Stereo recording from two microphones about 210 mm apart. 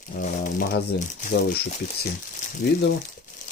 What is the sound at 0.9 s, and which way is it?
Speech, 50° left (ahead or behind).